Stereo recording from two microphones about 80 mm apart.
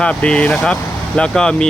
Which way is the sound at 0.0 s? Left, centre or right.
Centre.